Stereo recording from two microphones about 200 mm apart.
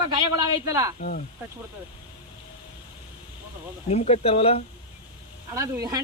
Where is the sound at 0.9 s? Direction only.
45° left (ahead or behind).